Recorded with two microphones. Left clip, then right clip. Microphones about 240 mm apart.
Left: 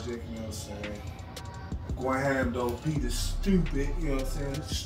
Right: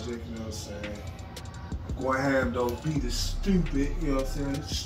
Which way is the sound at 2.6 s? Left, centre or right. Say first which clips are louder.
Right 2 dB; centre.